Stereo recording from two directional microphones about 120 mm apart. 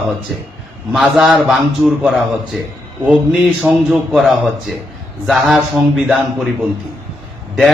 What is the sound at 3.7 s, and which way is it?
Speech, 15° right (ahead or behind).